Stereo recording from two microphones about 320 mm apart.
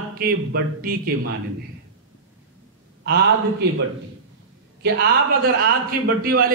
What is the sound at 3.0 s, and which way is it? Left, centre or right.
Speech, right.